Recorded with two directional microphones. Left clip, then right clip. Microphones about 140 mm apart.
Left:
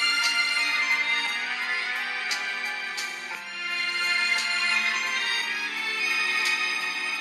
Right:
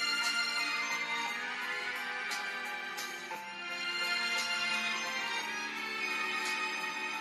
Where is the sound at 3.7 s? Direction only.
50° left (ahead or behind).